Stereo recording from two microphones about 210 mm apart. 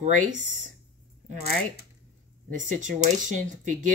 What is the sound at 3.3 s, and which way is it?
Speech, 40° right (ahead or behind).